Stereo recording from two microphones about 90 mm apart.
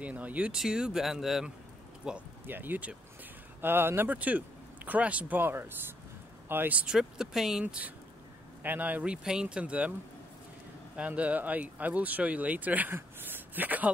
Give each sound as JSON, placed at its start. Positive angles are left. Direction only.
{"t": 0.0, "sound": "speech", "side_deg": -15}
{"t": 2.4, "sound": "speech", "side_deg": -20}
{"t": 7.6, "sound": "speech", "side_deg": -15}
{"t": 11.0, "sound": "speech", "side_deg": -15}